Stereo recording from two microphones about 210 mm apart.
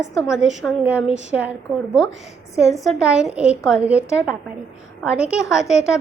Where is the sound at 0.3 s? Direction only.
5° right (ahead or behind).